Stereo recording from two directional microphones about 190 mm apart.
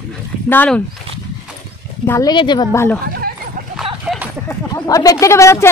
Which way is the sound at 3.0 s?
50° right (ahead or behind).